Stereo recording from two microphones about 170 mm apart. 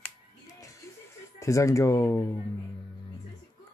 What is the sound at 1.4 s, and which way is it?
Speech, 20° left (ahead or behind).